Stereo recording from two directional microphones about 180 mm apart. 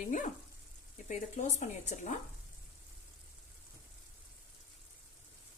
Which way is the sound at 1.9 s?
40° left (ahead or behind).